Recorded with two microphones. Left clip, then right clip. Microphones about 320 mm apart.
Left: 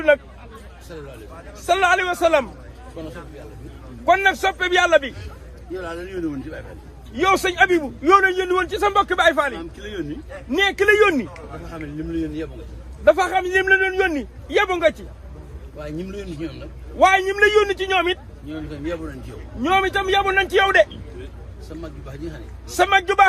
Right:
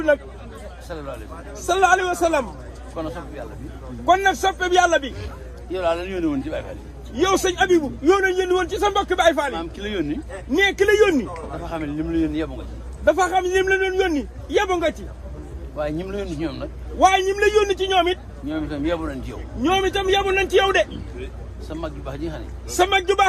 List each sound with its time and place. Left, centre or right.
1.5 s a man's voice: centre
4.0 s a man's voice: centre
5.7 s speech: centre
7.2 s a man's voice: centre
9.6 s speech: centre
10.5 s a man's voice: centre
11.6 s speech: centre
13.1 s a man's voice: centre
15.8 s speech: centre
17.0 s a man's voice: centre
18.7 s speech: centre
19.6 s a man's voice: centre
21.8 s speech: centre
22.7 s a man's voice: centre